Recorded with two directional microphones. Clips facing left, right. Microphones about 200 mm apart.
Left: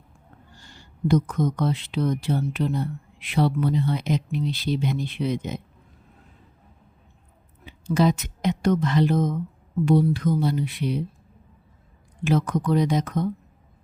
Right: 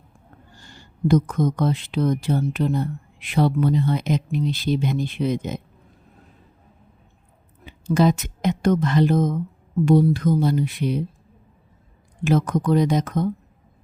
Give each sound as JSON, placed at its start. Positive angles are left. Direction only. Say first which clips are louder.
{"t": 1.0, "sound": "speech", "louder": "right 3 dB", "side_deg": -45}
{"t": 7.6, "sound": "a woman's voice", "louder": "right 2 dB", "side_deg": -50}
{"t": 12.2, "sound": "speech", "louder": "right 2 dB", "side_deg": -45}